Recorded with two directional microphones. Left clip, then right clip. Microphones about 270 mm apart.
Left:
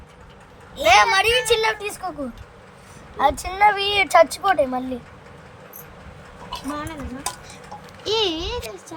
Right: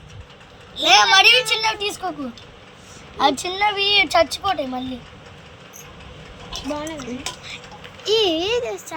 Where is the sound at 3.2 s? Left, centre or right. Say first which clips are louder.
Left 1 dB; left.